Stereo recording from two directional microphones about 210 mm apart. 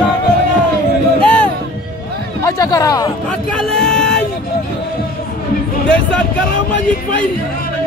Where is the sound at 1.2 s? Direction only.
5° left (ahead or behind).